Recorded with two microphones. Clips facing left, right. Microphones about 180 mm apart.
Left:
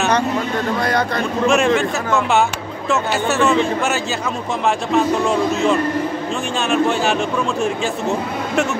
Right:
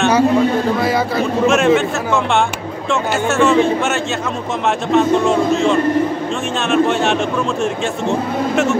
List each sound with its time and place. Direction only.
0.7 s a man's voice: 5° right (ahead or behind)